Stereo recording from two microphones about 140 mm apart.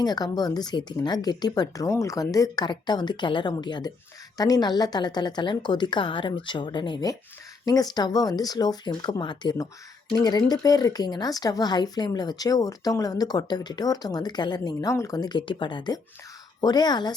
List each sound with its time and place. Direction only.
0.0 s a woman's voice: 30° left (ahead or behind)